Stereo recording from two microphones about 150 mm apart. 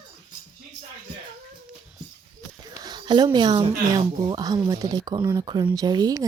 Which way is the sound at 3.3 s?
30° right (ahead or behind).